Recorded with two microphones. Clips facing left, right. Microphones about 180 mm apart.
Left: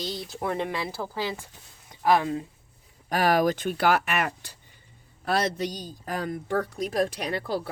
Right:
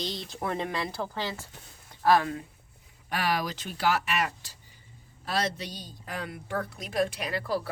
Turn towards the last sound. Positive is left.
turn(degrees=35)  # may be behind; listen again after turning